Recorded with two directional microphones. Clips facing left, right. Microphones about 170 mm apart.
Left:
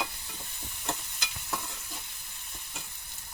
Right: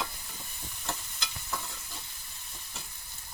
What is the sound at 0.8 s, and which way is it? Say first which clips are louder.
Stir: left 2 dB; 20° left (ahead or behind).